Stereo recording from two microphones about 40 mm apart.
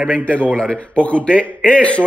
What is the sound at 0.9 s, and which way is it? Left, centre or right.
A man's voice, left.